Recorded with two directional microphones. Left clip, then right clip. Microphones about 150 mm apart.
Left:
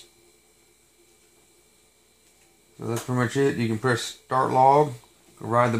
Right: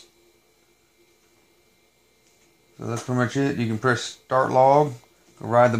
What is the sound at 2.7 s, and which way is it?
Speech, 35° right (ahead or behind).